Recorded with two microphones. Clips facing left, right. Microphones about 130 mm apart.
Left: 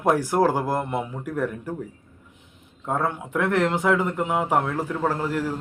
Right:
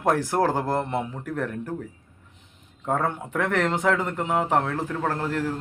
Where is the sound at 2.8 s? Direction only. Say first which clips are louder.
Even; 5° left (ahead or behind).